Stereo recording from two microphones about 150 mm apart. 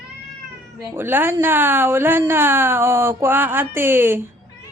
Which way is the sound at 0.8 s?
15° right (ahead or behind).